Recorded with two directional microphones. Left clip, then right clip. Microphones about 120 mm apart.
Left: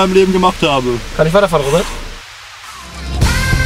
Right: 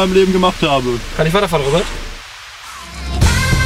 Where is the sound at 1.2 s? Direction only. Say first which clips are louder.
Left 4 dB; 25° right (ahead or behind).